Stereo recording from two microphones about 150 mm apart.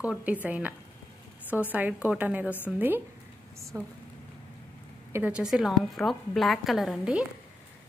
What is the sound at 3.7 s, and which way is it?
Speech, 20° right (ahead or behind).